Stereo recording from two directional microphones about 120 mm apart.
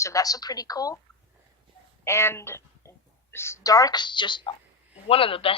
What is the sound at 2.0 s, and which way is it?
A woman's voice, 20° left (ahead or behind).